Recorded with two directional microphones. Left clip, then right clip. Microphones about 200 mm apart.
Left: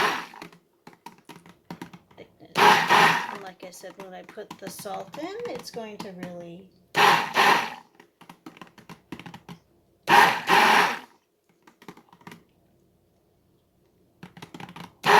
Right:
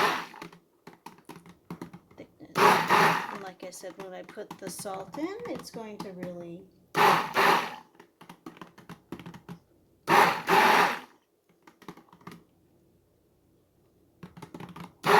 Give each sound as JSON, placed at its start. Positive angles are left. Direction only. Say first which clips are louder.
{"t": 0.0, "sound": "computer keyboard", "louder": "left 2 dB", "side_deg": -5}
{"t": 2.6, "sound": "roar", "louder": "left 4 dB", "side_deg": -5}
{"t": 3.4, "sound": "a sound", "louder": "even", "side_deg": -45}
{"t": 4.0, "sound": "speech", "louder": "left 2 dB", "side_deg": -45}
{"t": 6.9, "sound": "a sound", "louder": "left 3 dB", "side_deg": -5}
{"t": 11.6, "sound": "computer keyboard", "louder": "left 1 dB", "side_deg": 0}
{"t": 14.2, "sound": "computer keyboard", "louder": "left 3 dB", "side_deg": -5}